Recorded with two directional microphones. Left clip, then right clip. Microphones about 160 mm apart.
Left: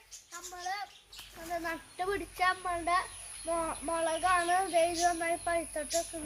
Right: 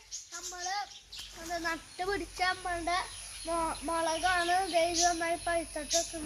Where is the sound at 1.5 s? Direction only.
30° left (ahead or behind).